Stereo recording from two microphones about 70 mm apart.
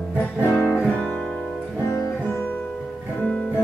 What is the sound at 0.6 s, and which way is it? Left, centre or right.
Music, centre.